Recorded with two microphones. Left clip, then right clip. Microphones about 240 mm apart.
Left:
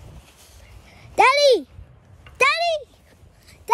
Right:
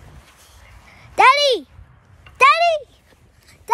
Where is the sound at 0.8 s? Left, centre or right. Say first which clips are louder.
Right 3 dB; centre.